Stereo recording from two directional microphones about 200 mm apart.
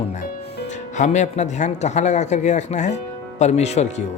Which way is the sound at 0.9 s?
35° left (ahead or behind).